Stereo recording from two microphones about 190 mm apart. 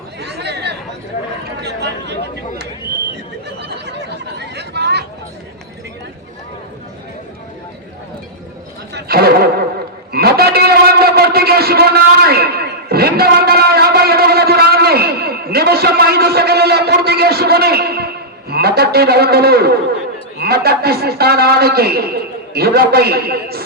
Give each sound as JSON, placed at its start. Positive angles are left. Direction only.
{"t": 0.2, "sound": "chatter", "side_deg": -60}
{"t": 1.6, "sound": "speech", "side_deg": -65}
{"t": 3.6, "sound": "chatter", "side_deg": -60}
{"t": 8.9, "sound": "a sound", "side_deg": -55}
{"t": 20.4, "sound": "a man's voice", "side_deg": -55}